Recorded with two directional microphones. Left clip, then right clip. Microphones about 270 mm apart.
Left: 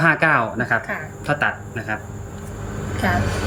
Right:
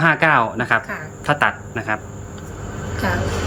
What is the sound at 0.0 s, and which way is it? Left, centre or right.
Speech, centre.